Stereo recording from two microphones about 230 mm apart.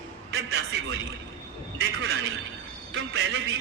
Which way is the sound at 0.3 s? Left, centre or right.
Right.